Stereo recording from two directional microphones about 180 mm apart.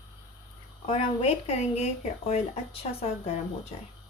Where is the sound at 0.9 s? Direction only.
30° left (ahead or behind).